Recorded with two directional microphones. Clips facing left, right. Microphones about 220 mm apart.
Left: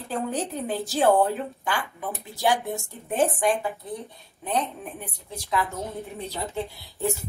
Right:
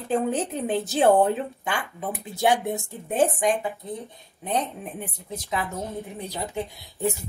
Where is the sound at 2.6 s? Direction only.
Centre (ahead or behind).